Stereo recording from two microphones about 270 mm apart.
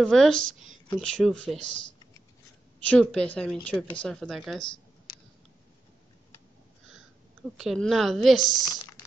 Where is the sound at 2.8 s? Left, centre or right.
Centre.